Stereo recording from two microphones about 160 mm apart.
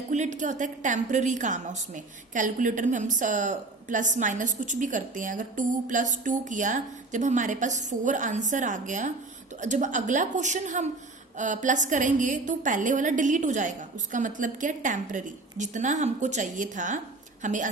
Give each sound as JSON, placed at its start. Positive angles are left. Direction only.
{"t": 0.1, "sound": "a woman's voice", "side_deg": -50}